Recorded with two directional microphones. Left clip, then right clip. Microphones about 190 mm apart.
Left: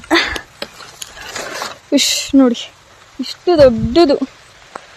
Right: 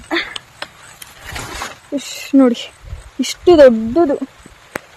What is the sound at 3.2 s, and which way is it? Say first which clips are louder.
Speech: right 2 dB; 30° right (ahead or behind).